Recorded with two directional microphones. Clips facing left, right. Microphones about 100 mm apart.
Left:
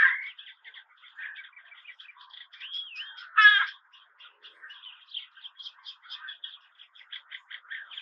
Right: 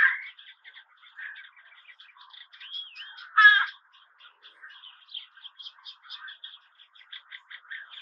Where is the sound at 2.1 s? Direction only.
10° right (ahead or behind).